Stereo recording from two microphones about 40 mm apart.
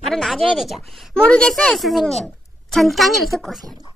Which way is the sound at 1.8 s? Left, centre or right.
Centre.